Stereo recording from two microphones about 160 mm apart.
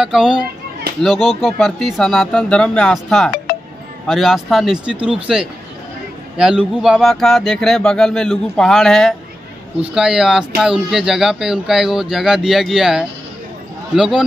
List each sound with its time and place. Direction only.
0.0 s speech: 5° right (ahead or behind)
3.5 s music: 70° left (ahead or behind)
4.1 s speech: centre (ahead or behind)